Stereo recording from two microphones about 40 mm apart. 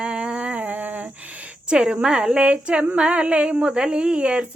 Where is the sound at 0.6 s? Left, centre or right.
Right.